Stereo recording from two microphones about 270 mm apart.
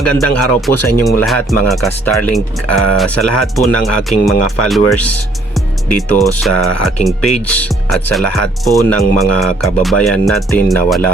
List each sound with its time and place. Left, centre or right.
0.0 s speech: centre